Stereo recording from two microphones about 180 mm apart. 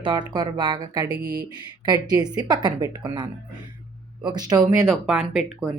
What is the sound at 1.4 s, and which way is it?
Speech, 20° right (ahead or behind).